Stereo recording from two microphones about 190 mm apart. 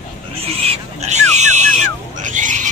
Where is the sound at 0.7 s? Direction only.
35° right (ahead or behind).